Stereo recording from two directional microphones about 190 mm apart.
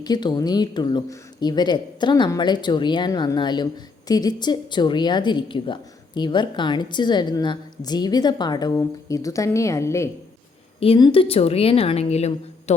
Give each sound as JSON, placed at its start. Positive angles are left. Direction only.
{"t": 0.0, "sound": "a woman's voice", "side_deg": 20}
{"t": 10.8, "sound": "speech", "side_deg": 30}